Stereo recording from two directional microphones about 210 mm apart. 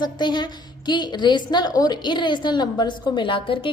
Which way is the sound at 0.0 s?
20° left (ahead or behind).